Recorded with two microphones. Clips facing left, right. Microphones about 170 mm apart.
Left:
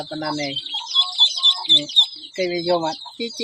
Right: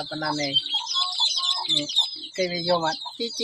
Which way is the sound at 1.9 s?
20° left (ahead or behind).